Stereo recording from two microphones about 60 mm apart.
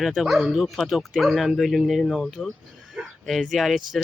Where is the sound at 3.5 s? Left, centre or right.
Centre.